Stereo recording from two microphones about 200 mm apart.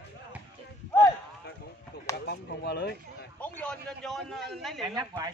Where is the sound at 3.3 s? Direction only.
5° left (ahead or behind).